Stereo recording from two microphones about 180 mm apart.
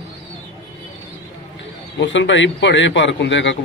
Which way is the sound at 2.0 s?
90° left.